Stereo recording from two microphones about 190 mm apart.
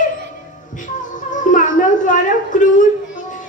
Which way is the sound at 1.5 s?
45° left (ahead or behind).